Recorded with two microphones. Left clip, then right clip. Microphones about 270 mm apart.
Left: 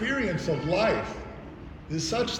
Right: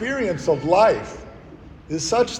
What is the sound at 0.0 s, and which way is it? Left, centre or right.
A man's voice, centre.